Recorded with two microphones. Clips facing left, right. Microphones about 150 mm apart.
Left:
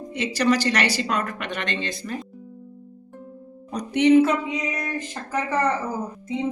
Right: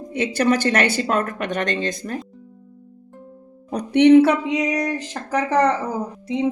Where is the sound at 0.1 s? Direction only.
55° right (ahead or behind).